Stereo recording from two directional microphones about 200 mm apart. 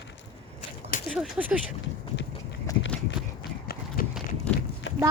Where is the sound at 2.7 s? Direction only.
15° left (ahead or behind).